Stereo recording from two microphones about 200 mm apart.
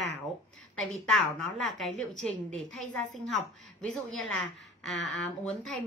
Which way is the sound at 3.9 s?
5° left (ahead or behind).